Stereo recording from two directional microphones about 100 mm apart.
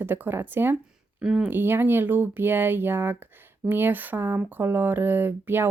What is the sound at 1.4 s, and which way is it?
Speech, 20° right (ahead or behind).